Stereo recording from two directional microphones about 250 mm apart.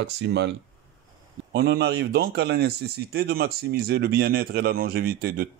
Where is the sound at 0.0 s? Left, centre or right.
Right.